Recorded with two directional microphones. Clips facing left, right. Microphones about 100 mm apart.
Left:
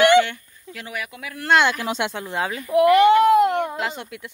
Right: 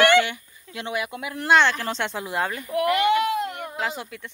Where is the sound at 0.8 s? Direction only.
25° right (ahead or behind).